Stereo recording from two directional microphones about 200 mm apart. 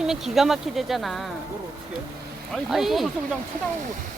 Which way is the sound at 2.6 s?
Centre (ahead or behind).